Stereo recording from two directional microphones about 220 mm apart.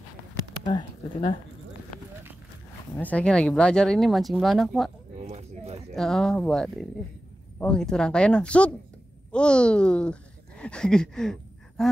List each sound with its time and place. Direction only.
0.7 s speech: 20° left (ahead or behind)
3.0 s speech: 5° left (ahead or behind)
5.2 s a sound: 30° right (ahead or behind)
5.9 s speech: centre (ahead or behind)